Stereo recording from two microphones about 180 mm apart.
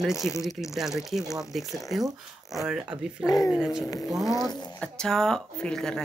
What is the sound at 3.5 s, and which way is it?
Speech, centre (ahead or behind).